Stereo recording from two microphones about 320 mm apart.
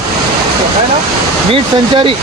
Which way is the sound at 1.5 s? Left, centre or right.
Centre.